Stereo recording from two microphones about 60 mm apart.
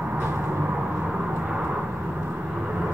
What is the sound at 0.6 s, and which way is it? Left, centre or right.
Vehicle, right.